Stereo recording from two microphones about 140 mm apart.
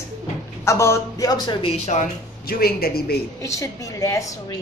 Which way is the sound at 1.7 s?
55° left (ahead or behind).